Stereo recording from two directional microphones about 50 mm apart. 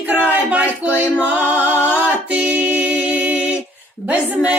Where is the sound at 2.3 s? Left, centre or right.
Right.